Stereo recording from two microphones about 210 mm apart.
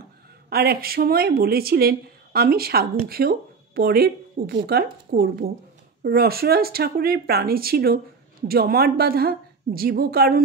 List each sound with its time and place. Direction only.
0.5 s speech: 45° right (ahead or behind)